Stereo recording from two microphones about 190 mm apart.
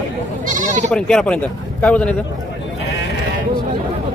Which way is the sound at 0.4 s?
45° right (ahead or behind).